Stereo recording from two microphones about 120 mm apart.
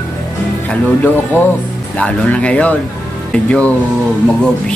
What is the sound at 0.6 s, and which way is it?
Speech, 15° left (ahead or behind).